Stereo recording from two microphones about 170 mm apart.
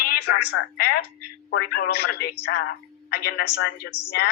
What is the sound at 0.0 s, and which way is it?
A woman's voice, 75° left (ahead or behind).